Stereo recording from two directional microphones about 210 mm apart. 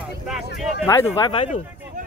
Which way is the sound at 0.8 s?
20° left (ahead or behind).